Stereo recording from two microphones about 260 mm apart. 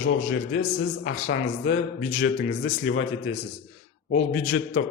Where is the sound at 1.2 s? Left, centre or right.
Left.